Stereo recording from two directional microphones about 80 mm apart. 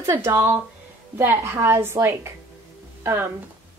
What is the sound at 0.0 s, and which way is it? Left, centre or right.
A woman's voice, right.